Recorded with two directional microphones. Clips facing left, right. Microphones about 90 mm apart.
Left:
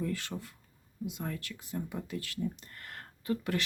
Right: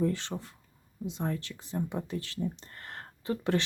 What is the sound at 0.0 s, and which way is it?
Speech, 25° right (ahead or behind).